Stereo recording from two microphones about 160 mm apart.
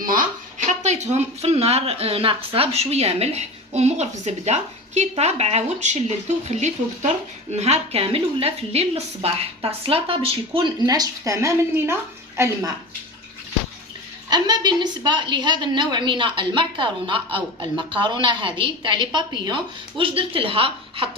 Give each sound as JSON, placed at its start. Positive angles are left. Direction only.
{"t": 0.0, "sound": "a sound", "side_deg": -60}
{"t": 0.7, "sound": "speech", "side_deg": -45}
{"t": 10.8, "sound": "a woman's voice", "side_deg": -20}
{"t": 14.3, "sound": "a woman's voice", "side_deg": -25}